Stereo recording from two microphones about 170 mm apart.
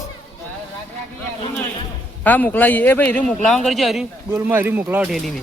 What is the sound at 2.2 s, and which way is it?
A man's voice, 10° left (ahead or behind).